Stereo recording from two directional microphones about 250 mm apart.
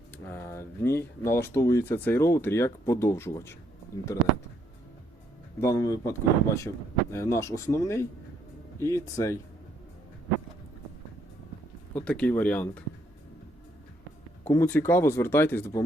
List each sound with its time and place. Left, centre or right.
0.3 s speech: centre
5.5 s speech: centre
11.9 s speech: centre
14.4 s speech: centre